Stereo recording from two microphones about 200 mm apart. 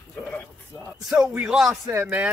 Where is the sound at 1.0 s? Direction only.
5° right (ahead or behind).